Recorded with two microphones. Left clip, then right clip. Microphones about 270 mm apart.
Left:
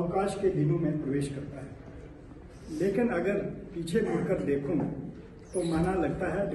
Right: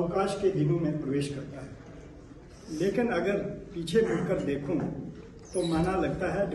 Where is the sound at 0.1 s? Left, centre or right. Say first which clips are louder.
Right 1 dB; centre.